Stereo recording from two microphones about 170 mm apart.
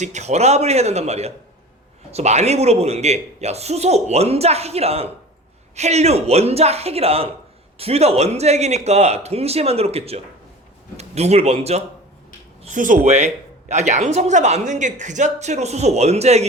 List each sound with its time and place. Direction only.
0.0 s speech: 45° right (ahead or behind)
12.6 s speech: 50° right (ahead or behind)